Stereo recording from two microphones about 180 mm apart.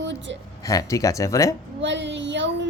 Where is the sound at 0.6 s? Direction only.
20° left (ahead or behind).